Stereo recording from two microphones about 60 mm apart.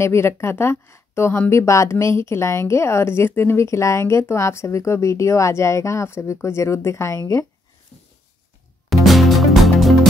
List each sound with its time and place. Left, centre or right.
0.0 s speech: left
8.9 s music: centre